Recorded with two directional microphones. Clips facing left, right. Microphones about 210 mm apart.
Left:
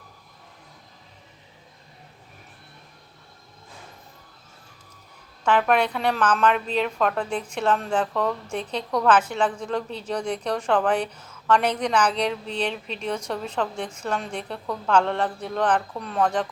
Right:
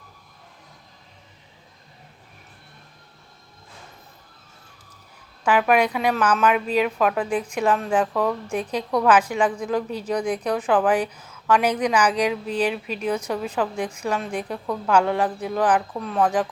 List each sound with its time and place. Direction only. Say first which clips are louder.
5.5 s a woman's voice: right 2 dB; 10° right (ahead or behind)